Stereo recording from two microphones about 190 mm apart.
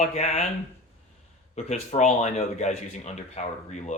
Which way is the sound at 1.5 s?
35° left (ahead or behind).